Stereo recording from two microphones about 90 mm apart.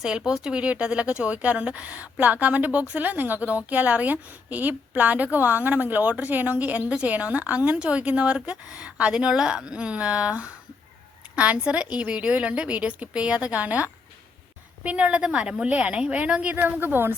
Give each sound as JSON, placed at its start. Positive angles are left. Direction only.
{"t": 0.3, "sound": "speech", "side_deg": -5}